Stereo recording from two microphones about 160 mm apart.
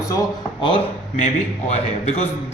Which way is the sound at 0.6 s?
35° left (ahead or behind).